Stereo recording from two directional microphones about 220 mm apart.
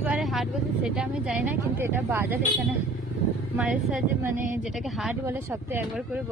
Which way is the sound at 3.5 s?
5° right (ahead or behind).